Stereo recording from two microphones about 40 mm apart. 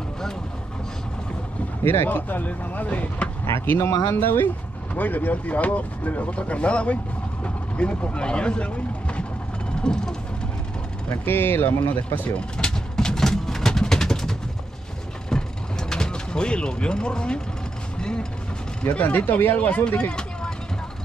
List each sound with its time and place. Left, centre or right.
2.0 s speech: left
3.4 s speech: left
4.9 s speech: left
7.4 s vehicle: left
8.2 s speech: left
9.8 s vehicle: centre
11.1 s speech: left
12.3 s vehicle: left
15.9 s speech: centre
18.9 s speech: left
20.0 s vehicle: left